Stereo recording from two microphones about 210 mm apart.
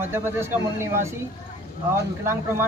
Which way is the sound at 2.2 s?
10° right (ahead or behind).